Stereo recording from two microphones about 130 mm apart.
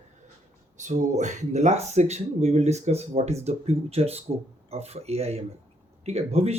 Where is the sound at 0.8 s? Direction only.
70° right (ahead or behind).